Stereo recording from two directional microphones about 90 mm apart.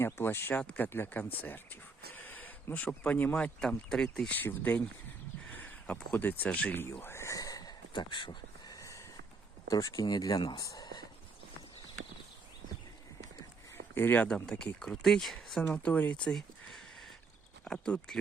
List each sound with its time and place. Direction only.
0.0 s speech: 25° left (ahead or behind)
0.6 s speech: 15° left (ahead or behind)
4.4 s speech: 20° left (ahead or behind); by 7.7 s 40° left (ahead or behind)
7.9 s a sound: 60° left (ahead or behind)
8.7 s a sound: 35° left (ahead or behind)
9.6 s speech: 40° left (ahead or behind)
13.9 s speech: 20° left (ahead or behind)
14.3 s speech: 10° left (ahead or behind)
15.6 s speech: 20° left (ahead or behind)
16.2 s a sound: 5° left (ahead or behind)
17.7 s speech: 10° left (ahead or behind)